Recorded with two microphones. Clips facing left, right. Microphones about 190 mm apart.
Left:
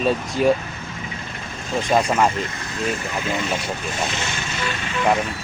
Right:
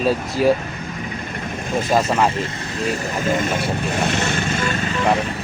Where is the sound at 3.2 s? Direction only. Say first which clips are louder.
Right 6 dB; 45° right (ahead or behind).